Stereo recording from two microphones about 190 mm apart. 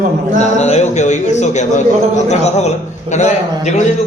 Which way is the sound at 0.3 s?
35° left (ahead or behind).